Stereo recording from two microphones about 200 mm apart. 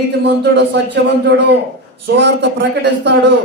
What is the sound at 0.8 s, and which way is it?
Speech, 60° right (ahead or behind).